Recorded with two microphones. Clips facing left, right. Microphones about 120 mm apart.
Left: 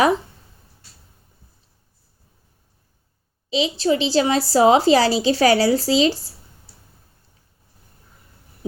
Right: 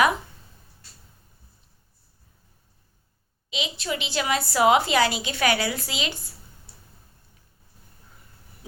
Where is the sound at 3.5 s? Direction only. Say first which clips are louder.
Left 11 dB; 30° left (ahead or behind).